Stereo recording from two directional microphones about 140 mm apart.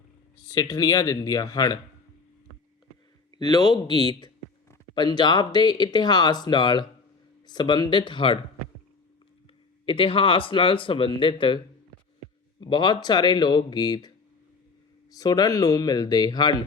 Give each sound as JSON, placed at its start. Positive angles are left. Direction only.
{"t": 0.4, "sound": "speech", "side_deg": 25}
{"t": 3.3, "sound": "speech", "side_deg": 30}
{"t": 9.8, "sound": "speech", "side_deg": 40}
{"t": 15.2, "sound": "speech", "side_deg": 25}